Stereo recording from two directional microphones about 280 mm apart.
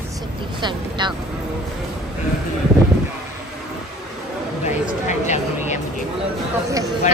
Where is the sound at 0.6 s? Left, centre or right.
Centre.